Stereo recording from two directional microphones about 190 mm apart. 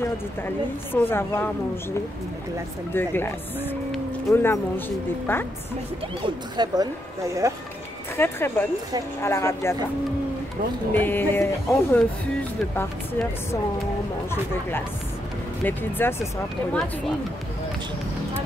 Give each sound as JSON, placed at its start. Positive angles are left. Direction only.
{"t": 0.9, "sound": "speech", "side_deg": 10}
{"t": 6.2, "sound": "speech", "side_deg": -20}
{"t": 8.2, "sound": "speech", "side_deg": 10}
{"t": 10.9, "sound": "speech", "side_deg": 10}
{"t": 15.6, "sound": "speech", "side_deg": 10}